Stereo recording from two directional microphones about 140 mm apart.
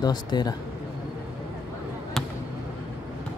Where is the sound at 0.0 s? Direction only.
30° left (ahead or behind).